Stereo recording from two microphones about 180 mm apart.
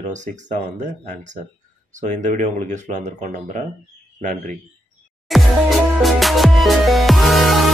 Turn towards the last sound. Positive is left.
turn(degrees=0)  # may be behind; listen again after turning